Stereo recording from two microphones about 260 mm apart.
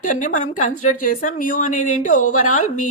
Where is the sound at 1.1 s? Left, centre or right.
Left.